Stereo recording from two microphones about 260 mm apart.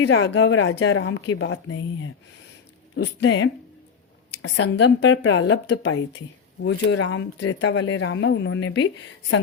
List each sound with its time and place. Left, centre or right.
0.0 s speech: left